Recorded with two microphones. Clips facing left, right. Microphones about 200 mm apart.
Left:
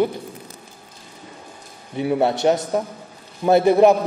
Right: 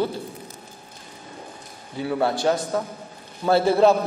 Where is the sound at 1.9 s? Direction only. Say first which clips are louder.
Left 4 dB; 20° left (ahead or behind).